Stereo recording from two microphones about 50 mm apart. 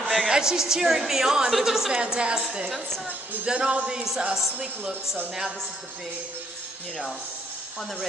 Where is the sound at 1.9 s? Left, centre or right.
Centre.